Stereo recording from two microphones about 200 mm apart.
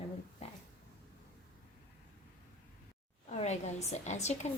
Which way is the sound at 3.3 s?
35° left (ahead or behind).